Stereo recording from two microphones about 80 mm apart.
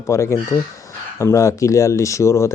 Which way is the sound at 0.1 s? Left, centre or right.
Left.